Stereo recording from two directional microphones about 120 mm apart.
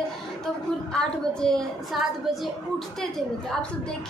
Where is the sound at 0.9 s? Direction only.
5° left (ahead or behind).